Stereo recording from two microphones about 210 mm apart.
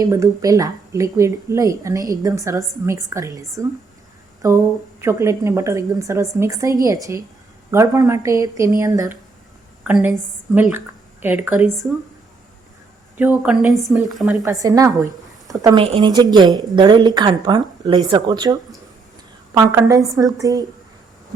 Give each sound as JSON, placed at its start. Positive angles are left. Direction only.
{"t": 0.0, "sound": "a woman's voice", "side_deg": -15}
{"t": 4.4, "sound": "a woman's voice", "side_deg": -15}
{"t": 13.4, "sound": "a woman's voice", "side_deg": -5}
{"t": 14.6, "sound": "a woman's voice", "side_deg": -15}